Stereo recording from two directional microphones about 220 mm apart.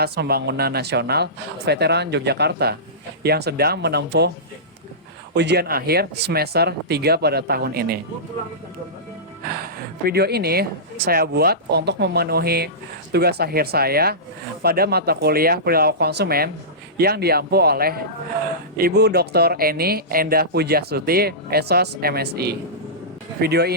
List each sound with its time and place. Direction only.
0.0 s speech: 45° right (ahead or behind)
5.3 s speech: 50° right (ahead or behind)
9.5 s speech: 45° right (ahead or behind)